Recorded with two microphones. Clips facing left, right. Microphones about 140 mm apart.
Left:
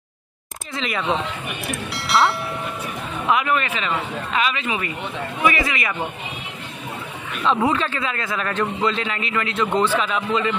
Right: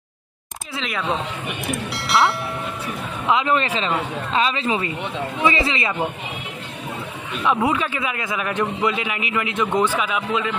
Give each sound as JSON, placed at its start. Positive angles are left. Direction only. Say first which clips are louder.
{"t": 0.7, "sound": "speech", "louder": "left 1 dB", "side_deg": 0}
{"t": 3.3, "sound": "a woman's voice", "louder": "right 1 dB", "side_deg": -25}
{"t": 7.4, "sound": "a man's voice", "louder": "even", "side_deg": -10}